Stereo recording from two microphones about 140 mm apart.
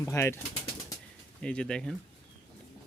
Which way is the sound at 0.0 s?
20° left (ahead or behind).